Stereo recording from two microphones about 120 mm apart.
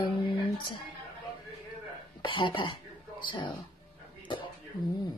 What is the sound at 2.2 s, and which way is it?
Speech, 45° left (ahead or behind).